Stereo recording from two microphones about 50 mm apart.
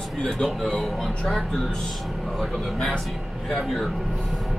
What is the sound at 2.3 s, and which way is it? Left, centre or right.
Speech, centre.